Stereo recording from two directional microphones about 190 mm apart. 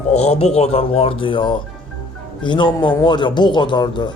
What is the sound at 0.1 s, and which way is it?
A man's voice, 35° left (ahead or behind).